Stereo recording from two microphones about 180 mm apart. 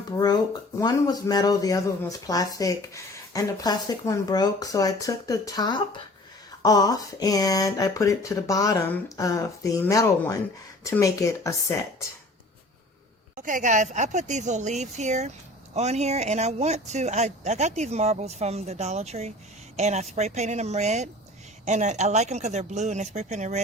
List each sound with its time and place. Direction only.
0.8 s speech: 20° left (ahead or behind)
13.3 s speech: 45° right (ahead or behind)